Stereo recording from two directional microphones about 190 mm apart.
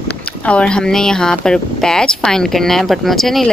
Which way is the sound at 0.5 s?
5° left (ahead or behind).